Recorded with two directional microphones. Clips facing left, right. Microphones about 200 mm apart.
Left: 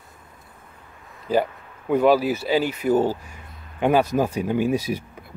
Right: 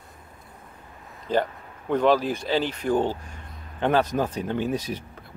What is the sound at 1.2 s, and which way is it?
Speech, 10° left (ahead or behind).